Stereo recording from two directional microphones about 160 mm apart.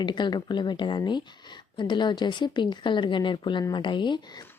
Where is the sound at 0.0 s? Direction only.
30° left (ahead or behind).